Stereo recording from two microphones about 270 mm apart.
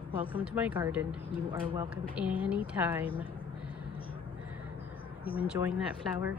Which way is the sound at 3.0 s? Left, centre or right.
Centre.